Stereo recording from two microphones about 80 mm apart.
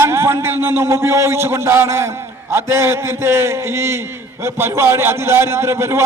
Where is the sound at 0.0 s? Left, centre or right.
Right.